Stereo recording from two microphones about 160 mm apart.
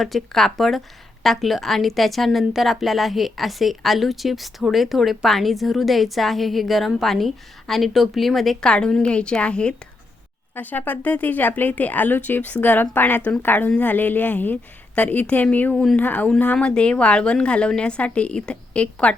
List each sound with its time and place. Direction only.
0.0 s a woman's voice: centre (ahead or behind)